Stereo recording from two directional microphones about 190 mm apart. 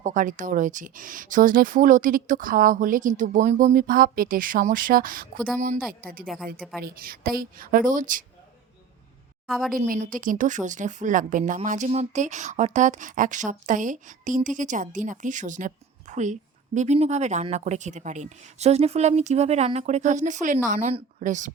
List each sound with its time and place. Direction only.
0.0 s speech: 45° right (ahead or behind)
6.2 s a woman's voice: centre (ahead or behind)
6.8 s speech: 50° right (ahead or behind)
9.7 s a woman's voice: 45° right (ahead or behind)